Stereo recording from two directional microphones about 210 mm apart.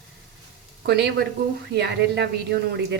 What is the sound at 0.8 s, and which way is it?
A woman's voice, 55° right (ahead or behind).